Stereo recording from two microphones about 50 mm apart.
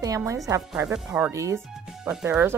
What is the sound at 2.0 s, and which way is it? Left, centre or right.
Speech, centre.